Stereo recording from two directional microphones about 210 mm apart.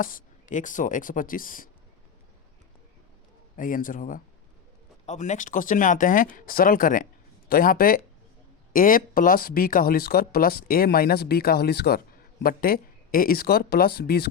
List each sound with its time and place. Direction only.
0.0 s speech: 40° left (ahead or behind)
3.6 s speech: 40° left (ahead or behind)